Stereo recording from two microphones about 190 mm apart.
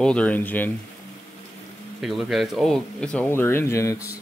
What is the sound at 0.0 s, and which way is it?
Speech, 5° left (ahead or behind).